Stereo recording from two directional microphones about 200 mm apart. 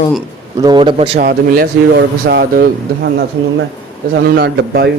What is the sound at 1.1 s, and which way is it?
Speech, 45° right (ahead or behind).